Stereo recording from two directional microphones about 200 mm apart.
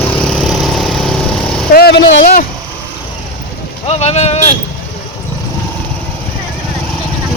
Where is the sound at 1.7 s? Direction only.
55° left (ahead or behind).